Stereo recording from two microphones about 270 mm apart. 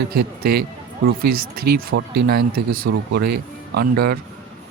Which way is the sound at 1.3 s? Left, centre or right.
Right.